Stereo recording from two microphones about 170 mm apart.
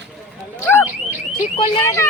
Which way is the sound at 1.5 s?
35° left (ahead or behind).